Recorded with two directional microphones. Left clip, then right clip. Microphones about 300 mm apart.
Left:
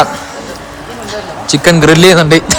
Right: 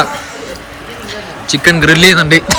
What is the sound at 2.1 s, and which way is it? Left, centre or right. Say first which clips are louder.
Speech: left 1 dB; centre.